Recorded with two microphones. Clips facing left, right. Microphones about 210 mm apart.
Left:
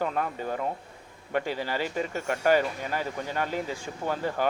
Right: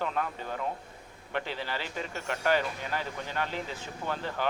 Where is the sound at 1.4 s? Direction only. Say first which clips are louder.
Left 6 dB; 45° left (ahead or behind).